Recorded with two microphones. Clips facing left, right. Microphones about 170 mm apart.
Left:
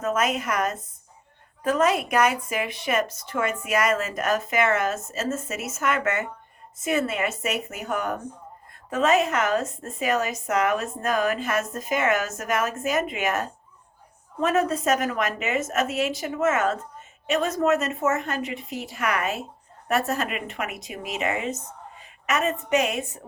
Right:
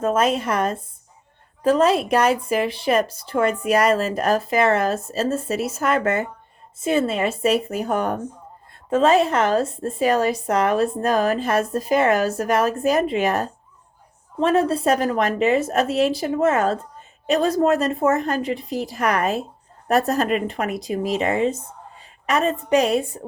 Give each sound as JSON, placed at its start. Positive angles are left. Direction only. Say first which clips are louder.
{"t": 0.0, "sound": "speech", "louder": "right 5 dB", "side_deg": -30}